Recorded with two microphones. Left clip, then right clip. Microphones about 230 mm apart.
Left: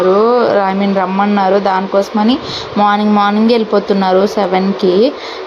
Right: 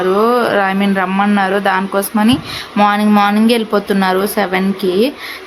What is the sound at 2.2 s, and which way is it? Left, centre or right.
Speech, right.